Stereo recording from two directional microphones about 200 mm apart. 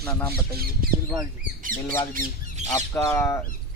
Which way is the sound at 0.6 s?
45° right (ahead or behind).